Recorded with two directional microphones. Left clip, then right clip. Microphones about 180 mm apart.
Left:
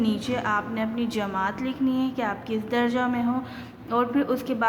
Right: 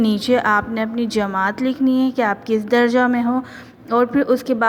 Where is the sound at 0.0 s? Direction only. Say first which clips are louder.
Right 10 dB; 45° right (ahead or behind).